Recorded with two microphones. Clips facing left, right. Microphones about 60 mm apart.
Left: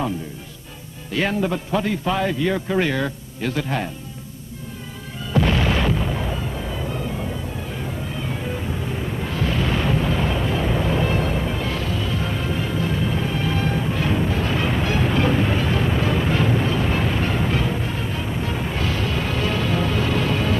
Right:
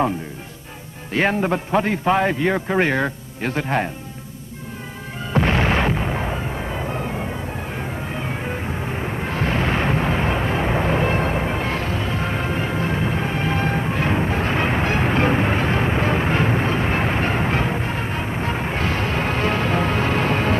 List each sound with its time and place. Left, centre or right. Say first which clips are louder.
1.1 s a man's voice: right 2 dB; right
5.3 s artillery fire: right 1 dB; right
7.7 s vehicle: right 1 dB; right